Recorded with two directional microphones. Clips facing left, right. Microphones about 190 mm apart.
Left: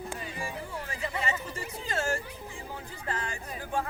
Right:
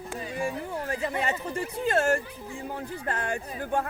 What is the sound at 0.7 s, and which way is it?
Speech, 55° right (ahead or behind).